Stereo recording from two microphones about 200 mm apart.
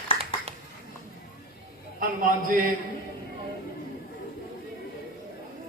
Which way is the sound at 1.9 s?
45° right (ahead or behind).